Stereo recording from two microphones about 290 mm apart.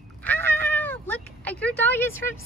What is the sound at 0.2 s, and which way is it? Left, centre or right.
Meow, centre.